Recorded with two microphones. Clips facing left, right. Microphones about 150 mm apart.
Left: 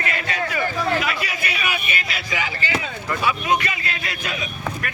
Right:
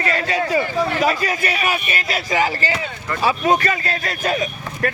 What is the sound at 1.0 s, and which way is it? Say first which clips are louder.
A man's voice: right 7 dB; 40° right (ahead or behind).